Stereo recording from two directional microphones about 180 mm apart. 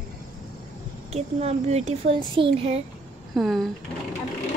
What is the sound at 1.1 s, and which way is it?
Speech, 35° right (ahead or behind).